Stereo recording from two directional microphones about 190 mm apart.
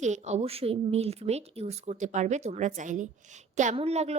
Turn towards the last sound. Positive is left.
turn(degrees=-35)  # may be behind; listen again after turning